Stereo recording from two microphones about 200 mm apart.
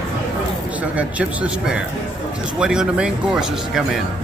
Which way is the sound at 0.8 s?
5° right (ahead or behind).